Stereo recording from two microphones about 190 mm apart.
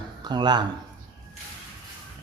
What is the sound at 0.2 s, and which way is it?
Speech, 25° right (ahead or behind).